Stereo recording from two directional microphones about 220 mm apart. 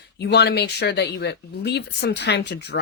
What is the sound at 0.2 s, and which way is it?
Speech, 50° left (ahead or behind).